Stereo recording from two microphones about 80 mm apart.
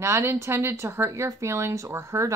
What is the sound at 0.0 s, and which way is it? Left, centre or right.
Speech, right.